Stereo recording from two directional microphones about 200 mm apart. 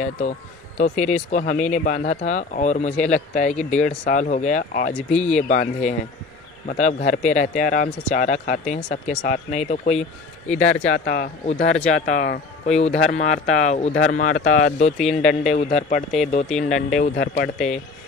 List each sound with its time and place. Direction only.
0.7 s speech: 40° left (ahead or behind)